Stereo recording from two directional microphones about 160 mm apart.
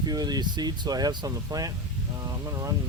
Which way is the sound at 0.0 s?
25° right (ahead or behind).